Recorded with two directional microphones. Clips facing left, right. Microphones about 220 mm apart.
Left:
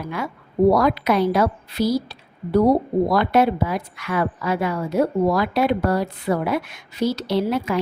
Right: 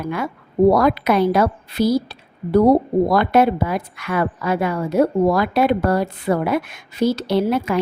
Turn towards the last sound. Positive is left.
turn(degrees=-55)  # may be behind; listen again after turning